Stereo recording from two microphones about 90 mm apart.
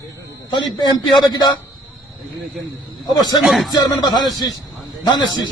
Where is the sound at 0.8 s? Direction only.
55° left (ahead or behind).